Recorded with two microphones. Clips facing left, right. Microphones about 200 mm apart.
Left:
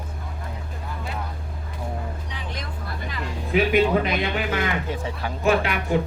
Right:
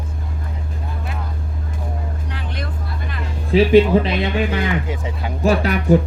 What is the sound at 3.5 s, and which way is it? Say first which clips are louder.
Speech: right 7 dB; 30° right (ahead or behind).